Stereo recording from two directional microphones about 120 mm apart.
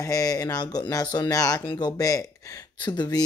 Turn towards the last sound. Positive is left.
turn(degrees=40)  # may be behind; listen again after turning